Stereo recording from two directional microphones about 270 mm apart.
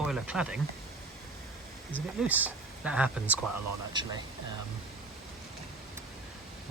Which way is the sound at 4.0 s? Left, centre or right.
Centre.